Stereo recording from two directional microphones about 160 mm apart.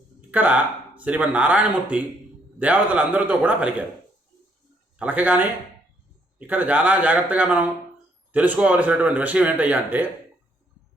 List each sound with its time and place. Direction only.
0.2 s speech: 10° right (ahead or behind)
4.9 s speech: 10° right (ahead or behind)
6.5 s speech: 10° right (ahead or behind)